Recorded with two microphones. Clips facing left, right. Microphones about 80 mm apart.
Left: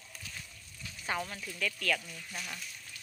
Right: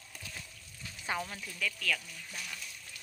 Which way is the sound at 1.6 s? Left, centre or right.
Centre.